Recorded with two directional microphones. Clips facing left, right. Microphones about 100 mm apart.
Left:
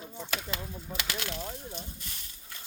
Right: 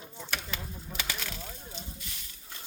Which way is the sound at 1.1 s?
65° left (ahead or behind).